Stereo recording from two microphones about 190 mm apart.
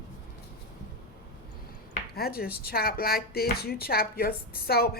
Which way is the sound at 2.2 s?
55° left (ahead or behind).